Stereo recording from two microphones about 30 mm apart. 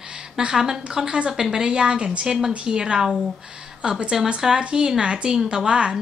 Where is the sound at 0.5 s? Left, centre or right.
Centre.